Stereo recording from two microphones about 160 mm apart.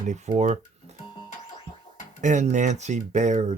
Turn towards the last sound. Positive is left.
turn(degrees=-45)  # may be behind; listen again after turning